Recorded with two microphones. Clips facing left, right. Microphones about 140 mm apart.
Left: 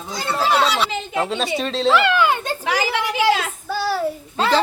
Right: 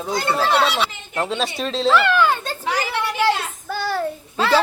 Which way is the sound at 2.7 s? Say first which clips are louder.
Left 1 dB; 90° left.